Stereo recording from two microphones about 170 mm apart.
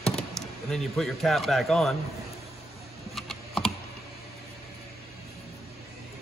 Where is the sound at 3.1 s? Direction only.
Centre (ahead or behind).